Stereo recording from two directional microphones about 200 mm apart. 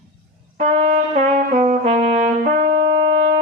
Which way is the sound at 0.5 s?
35° right (ahead or behind).